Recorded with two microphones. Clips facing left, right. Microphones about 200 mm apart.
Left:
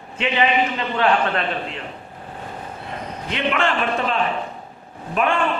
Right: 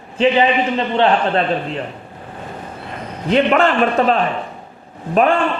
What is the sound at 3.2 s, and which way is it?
A man's voice, 40° right (ahead or behind).